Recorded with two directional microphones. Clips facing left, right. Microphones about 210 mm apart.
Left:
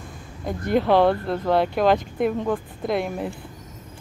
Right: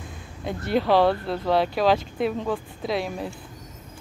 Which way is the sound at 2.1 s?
15° left (ahead or behind).